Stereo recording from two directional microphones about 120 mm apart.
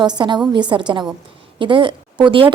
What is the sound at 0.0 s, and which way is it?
A woman's voice, 40° right (ahead or behind).